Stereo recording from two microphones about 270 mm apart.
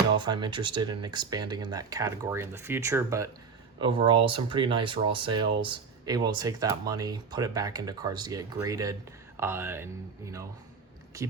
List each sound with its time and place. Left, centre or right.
0.2 s speech: centre